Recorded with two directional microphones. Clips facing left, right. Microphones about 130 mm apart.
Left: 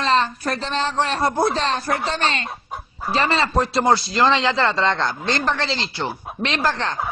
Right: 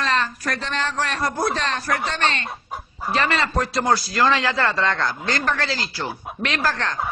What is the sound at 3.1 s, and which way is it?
A man's voice, 30° left (ahead or behind).